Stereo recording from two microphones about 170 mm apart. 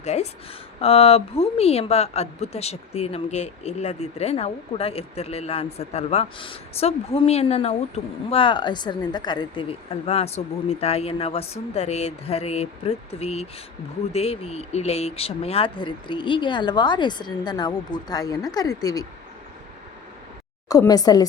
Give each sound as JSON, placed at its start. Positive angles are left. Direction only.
{"t": 0.0, "sound": "a woman's voice", "side_deg": 40}
{"t": 20.7, "sound": "speech", "side_deg": 20}